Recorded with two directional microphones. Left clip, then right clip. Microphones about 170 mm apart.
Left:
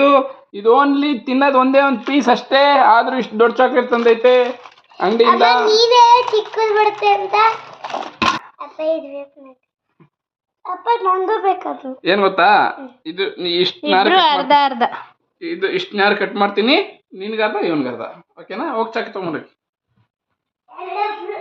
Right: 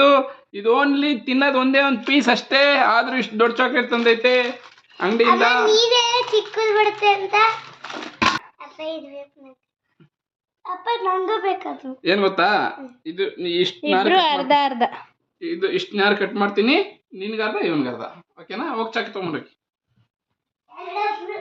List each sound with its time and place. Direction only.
0.0 s a child's voice: 10° left (ahead or behind); by 7.4 s 15° right (ahead or behind)
8.4 s a sound: 15° right (ahead or behind)
10.6 s a child's voice: 25° right (ahead or behind); by 15.1 s centre (ahead or behind)
15.4 s a woman's voice: 20° right (ahead or behind)